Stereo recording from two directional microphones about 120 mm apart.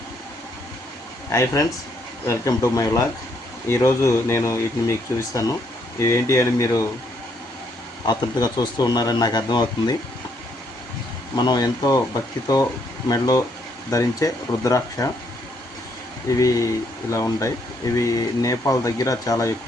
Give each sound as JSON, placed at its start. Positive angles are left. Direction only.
{"t": 1.3, "sound": "speech", "side_deg": 25}
{"t": 8.0, "sound": "speech", "side_deg": 35}
{"t": 11.3, "sound": "speech", "side_deg": 35}
{"t": 16.3, "sound": "speech", "side_deg": 25}